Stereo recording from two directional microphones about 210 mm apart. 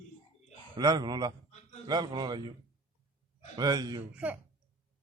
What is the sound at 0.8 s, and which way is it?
A man's voice, 20° right (ahead or behind).